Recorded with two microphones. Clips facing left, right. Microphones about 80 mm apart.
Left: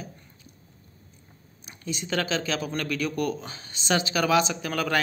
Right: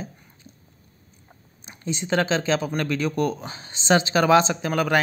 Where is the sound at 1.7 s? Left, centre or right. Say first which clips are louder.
Right 5 dB; right.